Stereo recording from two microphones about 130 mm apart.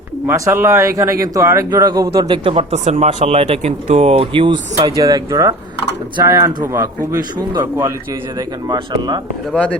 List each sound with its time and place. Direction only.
0.3 s speech: 20° right (ahead or behind); by 2.6 s 45° right (ahead or behind)
2.7 s speech: 60° right (ahead or behind); by 4.5 s 45° right (ahead or behind)
4.9 s speech: 30° right (ahead or behind)
8.4 s speech: 35° right (ahead or behind)
9.5 s a man's voice: 10° left (ahead or behind)